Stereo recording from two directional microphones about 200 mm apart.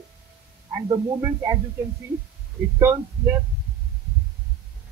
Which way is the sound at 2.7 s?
10° right (ahead or behind).